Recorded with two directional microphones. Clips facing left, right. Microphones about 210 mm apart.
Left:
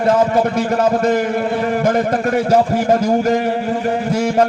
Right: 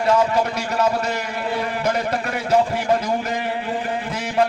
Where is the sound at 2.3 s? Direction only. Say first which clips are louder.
Left 4 dB; 45° left (ahead or behind).